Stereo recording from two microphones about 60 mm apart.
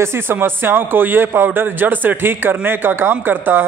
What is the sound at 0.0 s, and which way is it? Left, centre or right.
Speech, right.